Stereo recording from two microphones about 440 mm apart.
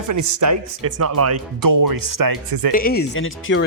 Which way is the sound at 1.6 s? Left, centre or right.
Right.